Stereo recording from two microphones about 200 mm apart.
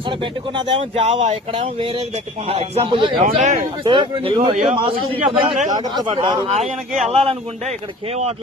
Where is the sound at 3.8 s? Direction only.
25° right (ahead or behind).